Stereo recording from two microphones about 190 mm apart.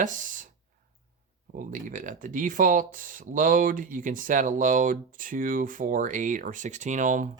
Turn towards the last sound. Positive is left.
turn(degrees=-40)  # may be behind; listen again after turning